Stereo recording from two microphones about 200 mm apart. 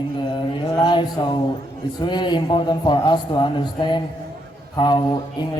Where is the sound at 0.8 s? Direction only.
20° left (ahead or behind).